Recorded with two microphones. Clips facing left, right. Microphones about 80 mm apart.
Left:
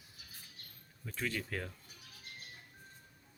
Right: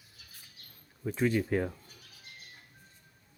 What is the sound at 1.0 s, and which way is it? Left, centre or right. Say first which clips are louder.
Speech: right 11 dB; right.